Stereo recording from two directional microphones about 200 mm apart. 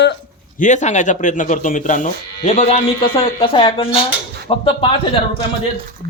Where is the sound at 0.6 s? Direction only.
40° left (ahead or behind).